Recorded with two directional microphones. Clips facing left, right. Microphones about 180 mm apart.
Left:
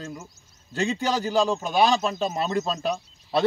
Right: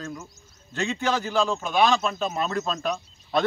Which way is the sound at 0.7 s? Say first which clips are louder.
Left 1 dB; 35° left (ahead or behind).